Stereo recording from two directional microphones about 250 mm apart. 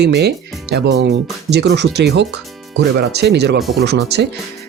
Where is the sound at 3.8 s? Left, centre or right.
Right.